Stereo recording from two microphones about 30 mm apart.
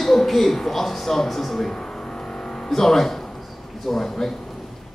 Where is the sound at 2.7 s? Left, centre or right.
Centre.